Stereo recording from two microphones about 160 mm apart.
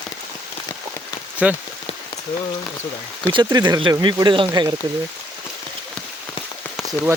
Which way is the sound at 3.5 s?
25° right (ahead or behind).